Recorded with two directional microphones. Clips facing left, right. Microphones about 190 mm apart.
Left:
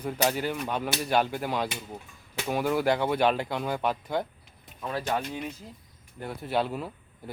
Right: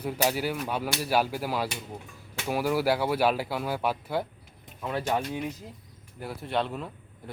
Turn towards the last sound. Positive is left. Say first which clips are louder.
# left 2 dB
turn(degrees=5)  # may be behind; listen again after turning